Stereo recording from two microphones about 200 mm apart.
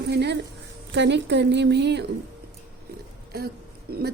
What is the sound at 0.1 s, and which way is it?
A woman's voice, 55° right (ahead or behind).